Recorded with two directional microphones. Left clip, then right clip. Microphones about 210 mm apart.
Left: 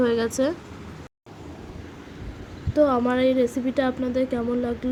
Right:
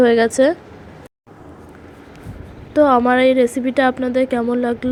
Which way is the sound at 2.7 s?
20° right (ahead or behind).